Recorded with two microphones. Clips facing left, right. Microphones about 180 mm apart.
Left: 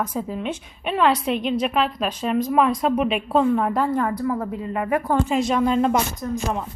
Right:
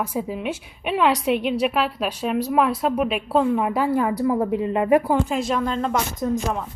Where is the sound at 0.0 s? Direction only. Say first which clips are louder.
Even; 10° right (ahead or behind).